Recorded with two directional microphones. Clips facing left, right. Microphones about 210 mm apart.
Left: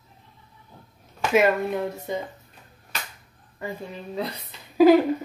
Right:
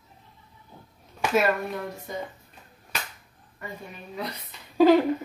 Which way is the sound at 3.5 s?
30° left (ahead or behind).